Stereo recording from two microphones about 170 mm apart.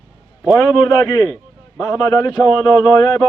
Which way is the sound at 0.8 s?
25° left (ahead or behind).